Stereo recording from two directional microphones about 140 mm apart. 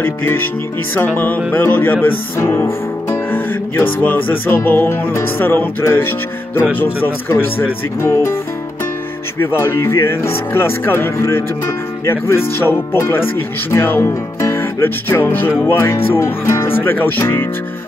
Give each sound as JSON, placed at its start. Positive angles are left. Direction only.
{"t": 0.0, "sound": "speech", "side_deg": 15}
{"t": 9.4, "sound": "speech", "side_deg": 20}